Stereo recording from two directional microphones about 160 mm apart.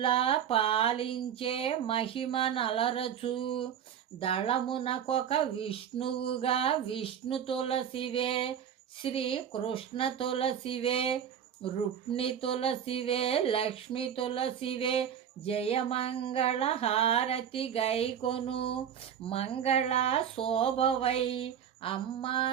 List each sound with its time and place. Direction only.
0.0 s speech: 35° left (ahead or behind)